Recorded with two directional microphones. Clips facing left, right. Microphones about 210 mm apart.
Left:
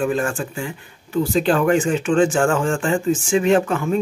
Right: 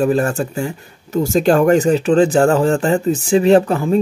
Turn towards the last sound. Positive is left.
turn(degrees=-35)  # may be behind; listen again after turning